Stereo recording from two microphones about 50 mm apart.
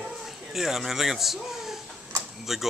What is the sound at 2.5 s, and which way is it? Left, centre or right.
Speech, centre.